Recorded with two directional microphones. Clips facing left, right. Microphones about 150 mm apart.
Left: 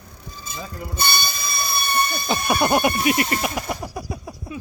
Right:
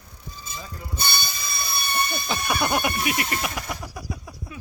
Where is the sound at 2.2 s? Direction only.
35° left (ahead or behind).